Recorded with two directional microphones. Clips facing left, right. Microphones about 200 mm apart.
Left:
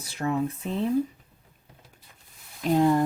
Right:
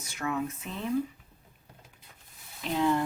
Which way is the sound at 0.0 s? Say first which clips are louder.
Left 5 dB; 35° left (ahead or behind).